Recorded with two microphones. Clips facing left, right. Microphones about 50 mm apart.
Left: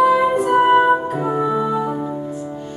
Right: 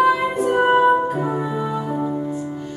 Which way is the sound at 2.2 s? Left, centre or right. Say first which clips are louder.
Right 1 dB; centre.